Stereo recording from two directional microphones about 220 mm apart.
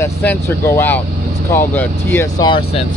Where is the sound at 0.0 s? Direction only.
10° left (ahead or behind).